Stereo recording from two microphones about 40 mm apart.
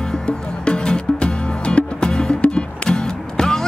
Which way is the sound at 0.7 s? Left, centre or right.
Left.